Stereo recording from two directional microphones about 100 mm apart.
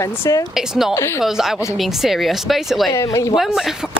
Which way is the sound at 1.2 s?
5° right (ahead or behind).